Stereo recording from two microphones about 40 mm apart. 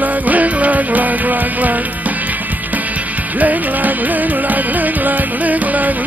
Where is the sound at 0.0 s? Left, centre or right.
Right.